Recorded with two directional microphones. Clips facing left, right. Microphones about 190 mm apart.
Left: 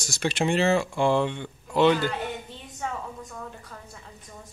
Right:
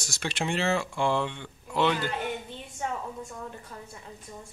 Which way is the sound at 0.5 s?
15° left (ahead or behind).